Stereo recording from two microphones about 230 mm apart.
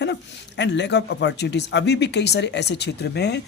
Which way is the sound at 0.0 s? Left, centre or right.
Left.